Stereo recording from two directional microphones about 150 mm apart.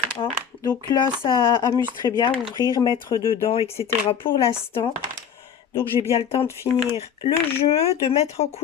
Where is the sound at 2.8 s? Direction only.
35° left (ahead or behind).